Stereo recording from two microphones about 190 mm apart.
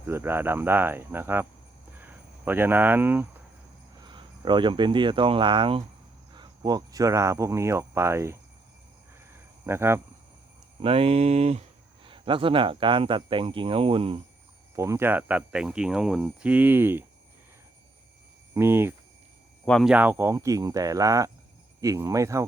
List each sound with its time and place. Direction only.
0.0 s speech: 10° right (ahead or behind)
4.0 s speech: 25° right (ahead or behind)
9.6 s speech: 15° right (ahead or behind)
10.8 s speech: 30° right (ahead or behind)
14.8 s speech: 15° right (ahead or behind)
18.5 s speech: 10° right (ahead or behind)
19.6 s speech: centre (ahead or behind); by 22.4 s 15° right (ahead or behind)